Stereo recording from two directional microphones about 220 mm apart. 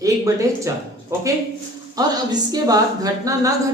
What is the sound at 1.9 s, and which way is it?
Speech, 15° right (ahead or behind).